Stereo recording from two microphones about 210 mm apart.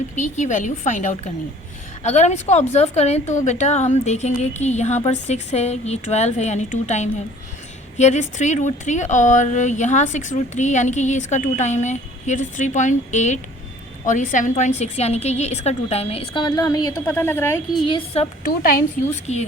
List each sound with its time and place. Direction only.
0.2 s speech: 35° left (ahead or behind); by 17.5 s 10° left (ahead or behind)
17.9 s a woman's voice: 30° left (ahead or behind)
18.4 s speech: 40° left (ahead or behind)